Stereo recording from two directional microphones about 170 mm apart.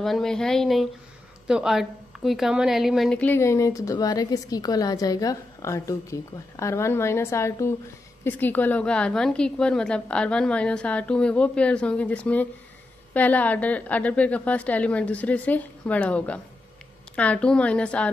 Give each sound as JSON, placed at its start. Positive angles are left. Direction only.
{"t": 0.0, "sound": "a woman's voice", "side_deg": 0}